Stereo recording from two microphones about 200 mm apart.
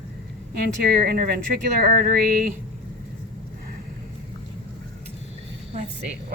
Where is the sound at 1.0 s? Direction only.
50° right (ahead or behind).